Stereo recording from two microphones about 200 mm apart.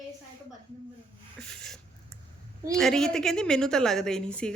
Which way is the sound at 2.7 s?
Centre (ahead or behind).